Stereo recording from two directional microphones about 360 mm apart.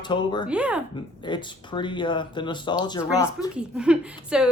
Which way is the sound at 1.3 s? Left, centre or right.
Centre.